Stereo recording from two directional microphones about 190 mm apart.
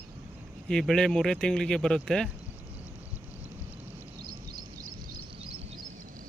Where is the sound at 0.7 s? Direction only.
5° left (ahead or behind).